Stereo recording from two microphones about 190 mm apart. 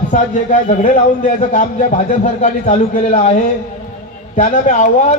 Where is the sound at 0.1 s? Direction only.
40° left (ahead or behind).